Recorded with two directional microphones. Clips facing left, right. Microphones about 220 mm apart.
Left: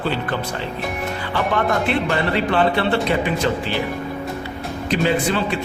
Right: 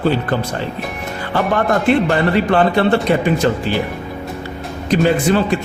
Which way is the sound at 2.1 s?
45° right (ahead or behind).